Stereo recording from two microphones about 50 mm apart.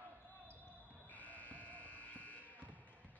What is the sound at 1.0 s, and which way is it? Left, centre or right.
Sheep, left.